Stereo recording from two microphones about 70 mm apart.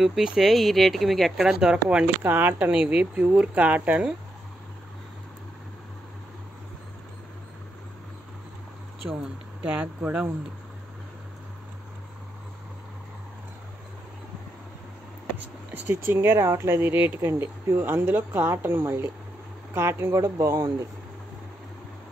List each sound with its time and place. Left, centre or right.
0.0 s speech: centre
1.5 s speech: centre
2.2 s speech: right
9.7 s speech: right
15.9 s speech: right
17.3 s speech: right